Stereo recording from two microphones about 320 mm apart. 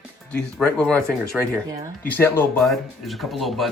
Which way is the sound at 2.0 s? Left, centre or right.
Centre.